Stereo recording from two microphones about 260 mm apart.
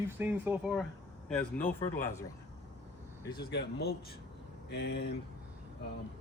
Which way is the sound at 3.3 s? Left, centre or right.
Left.